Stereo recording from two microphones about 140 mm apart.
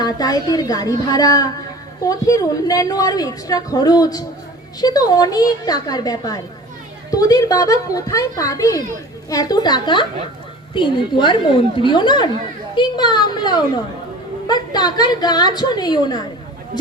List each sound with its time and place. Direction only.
0.0 s a woman's voice: 30° left (ahead or behind)